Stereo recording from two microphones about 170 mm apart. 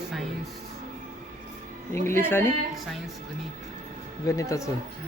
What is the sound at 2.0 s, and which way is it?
Speech, 15° left (ahead or behind).